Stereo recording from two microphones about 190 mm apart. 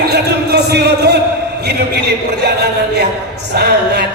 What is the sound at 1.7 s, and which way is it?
Music, 60° right (ahead or behind).